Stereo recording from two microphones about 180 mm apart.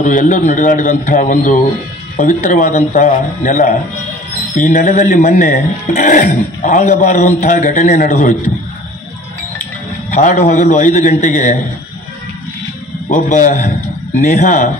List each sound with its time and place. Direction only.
0.0 s speech: 45° left (ahead or behind)
10.1 s speech: 40° left (ahead or behind)
13.1 s speech: 45° left (ahead or behind)